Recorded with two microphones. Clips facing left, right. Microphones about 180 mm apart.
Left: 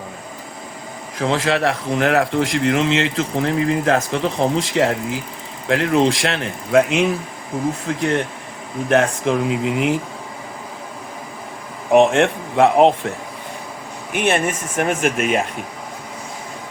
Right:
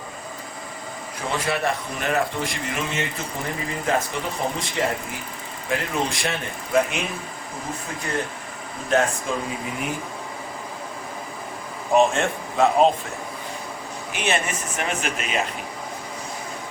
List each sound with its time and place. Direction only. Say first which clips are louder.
1.2 s a man's voice: left 7 dB; 90° left
8.9 s speech: left 5 dB; 70° left (ahead or behind); by 10.0 s 85° left
11.9 s speech: left 6 dB; 70° left (ahead or behind)
14.1 s speech: left 6 dB; 50° left (ahead or behind)